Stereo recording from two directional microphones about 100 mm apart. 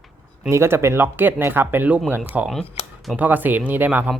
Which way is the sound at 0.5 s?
25° right (ahead or behind).